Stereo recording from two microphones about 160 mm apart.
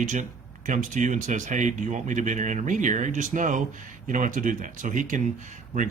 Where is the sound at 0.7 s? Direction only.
50° right (ahead or behind).